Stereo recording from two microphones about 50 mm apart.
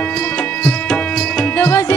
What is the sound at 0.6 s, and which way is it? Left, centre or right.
Music, centre.